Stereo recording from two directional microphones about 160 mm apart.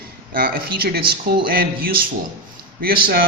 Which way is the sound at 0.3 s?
70° right (ahead or behind).